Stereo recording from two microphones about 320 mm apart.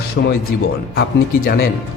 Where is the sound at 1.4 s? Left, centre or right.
Left.